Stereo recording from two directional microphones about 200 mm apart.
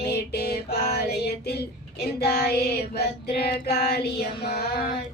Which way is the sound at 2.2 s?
50° left (ahead or behind).